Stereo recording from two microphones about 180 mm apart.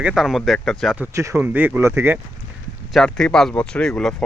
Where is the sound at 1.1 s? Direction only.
15° right (ahead or behind).